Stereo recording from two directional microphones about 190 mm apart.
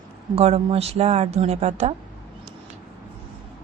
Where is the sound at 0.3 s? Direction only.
30° right (ahead or behind).